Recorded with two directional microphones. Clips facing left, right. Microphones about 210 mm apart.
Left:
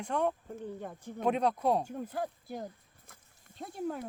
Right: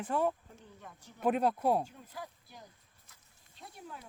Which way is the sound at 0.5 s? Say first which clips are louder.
Left 13 dB; 50° left (ahead or behind).